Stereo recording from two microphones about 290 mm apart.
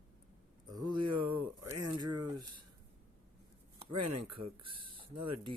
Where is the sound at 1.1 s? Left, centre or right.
Right.